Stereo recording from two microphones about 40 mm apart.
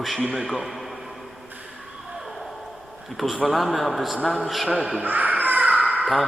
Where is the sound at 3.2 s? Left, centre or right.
Centre.